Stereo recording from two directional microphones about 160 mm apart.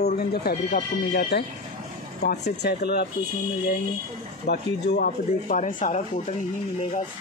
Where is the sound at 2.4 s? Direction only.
90° left.